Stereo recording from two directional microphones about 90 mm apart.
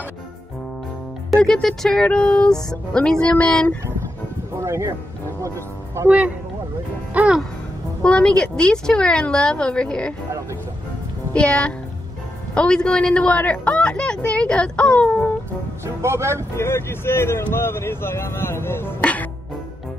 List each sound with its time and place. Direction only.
1.3 s a woman's voice: 5° left (ahead or behind)
4.6 s speech: 35° right (ahead or behind)
6.0 s music: 15° right (ahead or behind)
8.0 s a woman's voice: 10° left (ahead or behind)
11.3 s a woman's voice: 10° left (ahead or behind)
15.8 s speech: 30° right (ahead or behind)
16.5 s speech: 25° left (ahead or behind)